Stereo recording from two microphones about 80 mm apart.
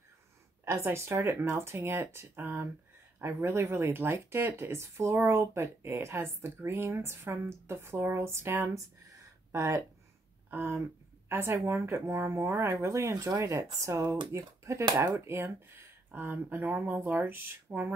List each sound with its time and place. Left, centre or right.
0.8 s speech: right
8.7 s a sound: right
11.2 s speech: right